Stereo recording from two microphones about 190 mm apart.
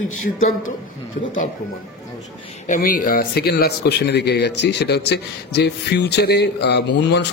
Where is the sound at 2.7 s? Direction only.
45° left (ahead or behind); by 7.2 s 65° left (ahead or behind).